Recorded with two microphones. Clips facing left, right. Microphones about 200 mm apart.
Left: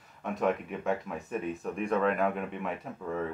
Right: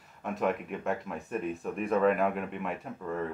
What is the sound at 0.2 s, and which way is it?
Speech, centre (ahead or behind).